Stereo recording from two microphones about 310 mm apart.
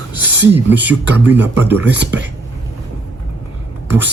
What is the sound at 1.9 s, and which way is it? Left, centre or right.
Speech, right.